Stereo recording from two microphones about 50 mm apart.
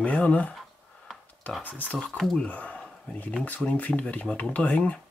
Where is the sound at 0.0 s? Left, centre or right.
Left.